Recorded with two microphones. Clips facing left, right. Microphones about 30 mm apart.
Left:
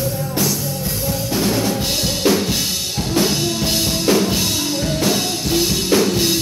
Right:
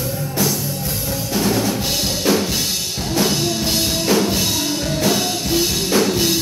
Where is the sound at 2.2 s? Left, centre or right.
Left.